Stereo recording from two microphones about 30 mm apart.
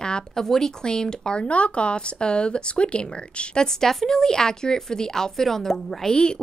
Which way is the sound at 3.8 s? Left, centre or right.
Centre.